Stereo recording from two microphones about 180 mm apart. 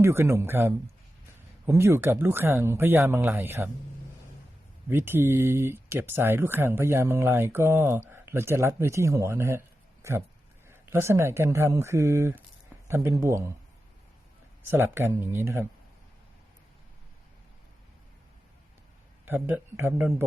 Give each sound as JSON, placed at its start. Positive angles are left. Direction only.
{"t": 0.0, "sound": "speech", "side_deg": -15}
{"t": 4.9, "sound": "speech", "side_deg": -10}
{"t": 14.7, "sound": "speech", "side_deg": -15}
{"t": 19.2, "sound": "speech", "side_deg": -10}